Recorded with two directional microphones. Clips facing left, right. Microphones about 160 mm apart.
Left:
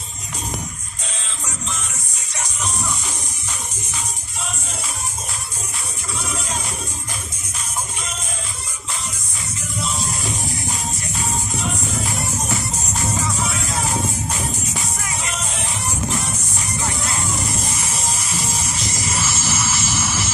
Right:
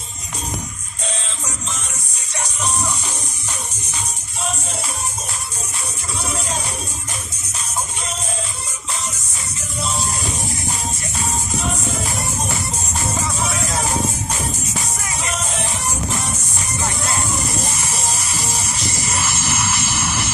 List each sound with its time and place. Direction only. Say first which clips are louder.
19.2 s vehicle: right 1 dB; 60° right (ahead or behind)